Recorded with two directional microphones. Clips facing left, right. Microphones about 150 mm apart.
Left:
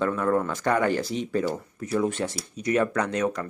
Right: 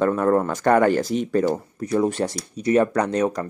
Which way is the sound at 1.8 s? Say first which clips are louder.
Right 4 dB; 40° right (ahead or behind).